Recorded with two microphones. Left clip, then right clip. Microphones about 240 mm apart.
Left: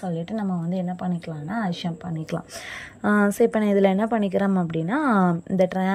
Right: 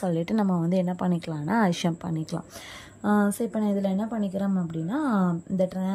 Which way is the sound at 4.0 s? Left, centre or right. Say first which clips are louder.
Left 8 dB; left.